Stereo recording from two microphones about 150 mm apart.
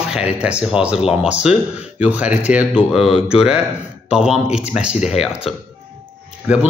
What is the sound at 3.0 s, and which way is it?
Speech, 40° left (ahead or behind).